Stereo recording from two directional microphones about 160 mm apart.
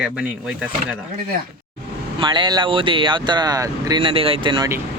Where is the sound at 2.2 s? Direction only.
30° right (ahead or behind).